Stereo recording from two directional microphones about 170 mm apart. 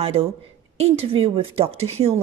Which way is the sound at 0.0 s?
35° right (ahead or behind).